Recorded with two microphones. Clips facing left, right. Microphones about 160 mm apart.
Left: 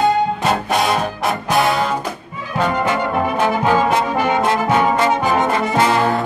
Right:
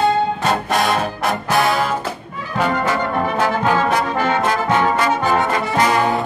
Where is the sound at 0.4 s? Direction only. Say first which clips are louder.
Left 1 dB; centre (ahead or behind).